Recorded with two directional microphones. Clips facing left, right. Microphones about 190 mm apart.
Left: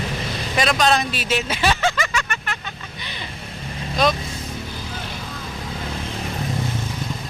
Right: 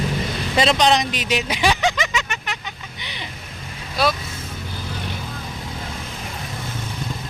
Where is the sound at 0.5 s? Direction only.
25° right (ahead or behind).